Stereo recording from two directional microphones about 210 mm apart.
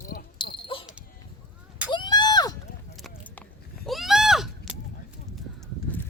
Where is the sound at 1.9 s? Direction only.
20° left (ahead or behind).